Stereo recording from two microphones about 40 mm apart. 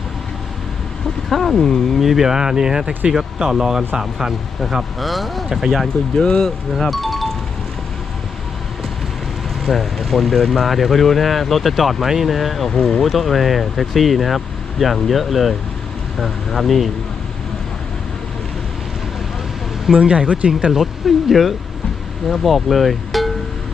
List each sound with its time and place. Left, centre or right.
1.3 s speech: centre
2.0 s speech: centre
6.1 s speech: centre
9.6 s speech: centre
19.9 s speech: right
21.2 s speech: centre